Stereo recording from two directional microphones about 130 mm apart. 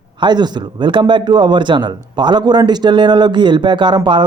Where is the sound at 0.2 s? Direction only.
35° right (ahead or behind).